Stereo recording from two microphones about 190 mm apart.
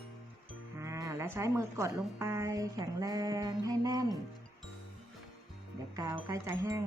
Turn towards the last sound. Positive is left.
turn(degrees=-15)  # may be behind; listen again after turning